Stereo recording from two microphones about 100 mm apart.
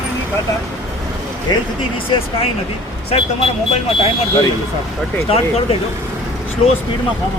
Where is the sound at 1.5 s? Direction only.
45° left (ahead or behind).